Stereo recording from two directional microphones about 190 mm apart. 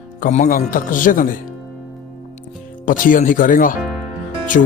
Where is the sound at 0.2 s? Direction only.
40° left (ahead or behind).